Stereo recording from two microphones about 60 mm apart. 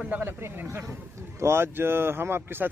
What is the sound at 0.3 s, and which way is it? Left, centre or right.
Speech, right.